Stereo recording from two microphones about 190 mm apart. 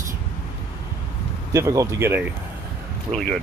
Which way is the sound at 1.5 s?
15° right (ahead or behind).